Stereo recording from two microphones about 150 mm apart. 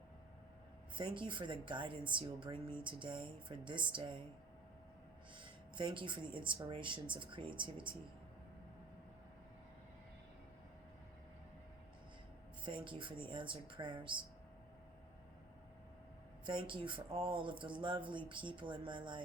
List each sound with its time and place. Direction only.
0.9 s speech: 35° right (ahead or behind)
5.4 s speech: 35° right (ahead or behind)
12.6 s speech: 35° right (ahead or behind)
16.5 s speech: 35° right (ahead or behind)